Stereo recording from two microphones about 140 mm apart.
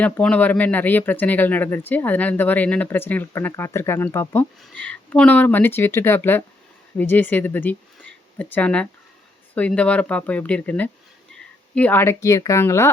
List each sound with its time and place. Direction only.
0.0 s speech: 10° left (ahead or behind)